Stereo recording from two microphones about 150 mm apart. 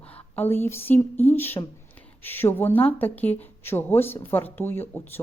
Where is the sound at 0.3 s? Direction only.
15° left (ahead or behind).